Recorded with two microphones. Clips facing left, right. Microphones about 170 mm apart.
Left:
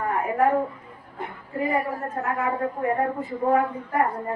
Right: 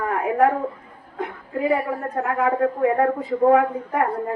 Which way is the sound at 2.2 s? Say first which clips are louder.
Right 6 dB; 70° right (ahead or behind).